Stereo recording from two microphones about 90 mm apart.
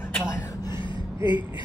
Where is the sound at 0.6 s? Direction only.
55° left (ahead or behind).